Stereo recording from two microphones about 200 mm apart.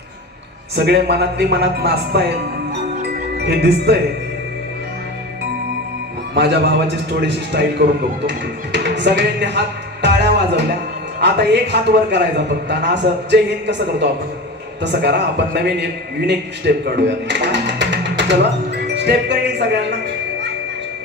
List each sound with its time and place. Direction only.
0.9 s a man's voice: 55° right (ahead or behind)
2.9 s music: 55° right (ahead or behind)
6.3 s a man's voice: 55° right (ahead or behind)
18.9 s music: 60° right (ahead or behind)